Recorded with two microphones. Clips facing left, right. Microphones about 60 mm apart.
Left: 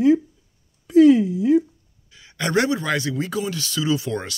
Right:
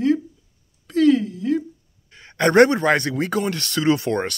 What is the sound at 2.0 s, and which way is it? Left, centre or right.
Speech, right.